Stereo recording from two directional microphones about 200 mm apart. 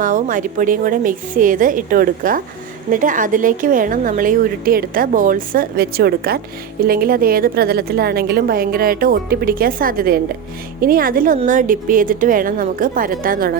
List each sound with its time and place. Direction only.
0.0 s a woman's voice: 40° right (ahead or behind)